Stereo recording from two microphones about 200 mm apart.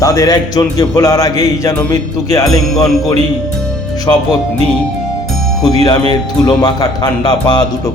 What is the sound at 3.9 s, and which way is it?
Speech, 20° left (ahead or behind).